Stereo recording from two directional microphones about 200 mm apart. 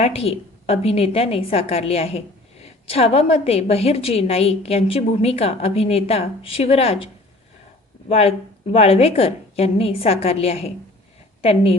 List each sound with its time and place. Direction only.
0.0 s a woman's voice: 30° left (ahead or behind)
8.1 s a woman's voice: 30° left (ahead or behind)